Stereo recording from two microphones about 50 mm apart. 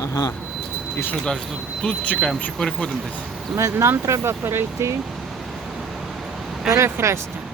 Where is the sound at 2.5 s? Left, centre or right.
Centre.